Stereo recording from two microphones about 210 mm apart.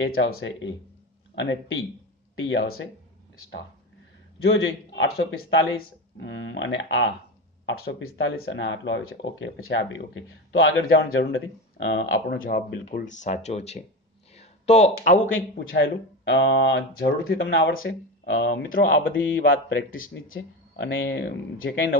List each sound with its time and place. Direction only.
0.2 s speech: 70° left (ahead or behind)
4.4 s speech: 60° left (ahead or behind); by 8.3 s 75° left (ahead or behind)
8.5 s speech: 60° left (ahead or behind)
12.8 s speech: 35° left (ahead or behind)
14.3 s a sound: 30° left (ahead or behind)
15.8 s speech: 55° left (ahead or behind)